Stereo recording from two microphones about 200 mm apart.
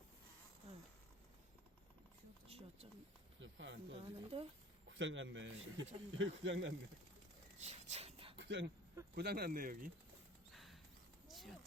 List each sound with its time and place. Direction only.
2.5 s a sound: 30° right (ahead or behind)
3.4 s speech: 65° right (ahead or behind)
4.3 s speech: 30° right (ahead or behind)
4.9 s speech: 65° right (ahead or behind)
7.6 s a sound: 30° right (ahead or behind)
8.4 s speech: 60° right (ahead or behind)
9.1 s speech: 50° right (ahead or behind)
10.5 s clip-clop: centre (ahead or behind)
11.3 s a sound: centre (ahead or behind)